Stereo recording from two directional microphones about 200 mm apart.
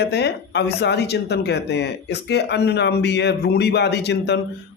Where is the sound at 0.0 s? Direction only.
55° left (ahead or behind).